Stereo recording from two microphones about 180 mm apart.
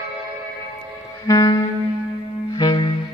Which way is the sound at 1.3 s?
20° left (ahead or behind).